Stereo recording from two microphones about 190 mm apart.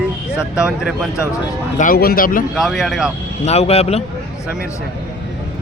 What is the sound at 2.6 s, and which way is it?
Speech, centre (ahead or behind).